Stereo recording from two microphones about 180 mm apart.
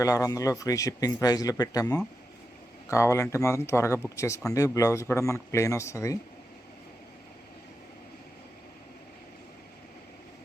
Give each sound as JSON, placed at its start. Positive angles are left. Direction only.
{"t": 0.0, "sound": "speech", "side_deg": 20}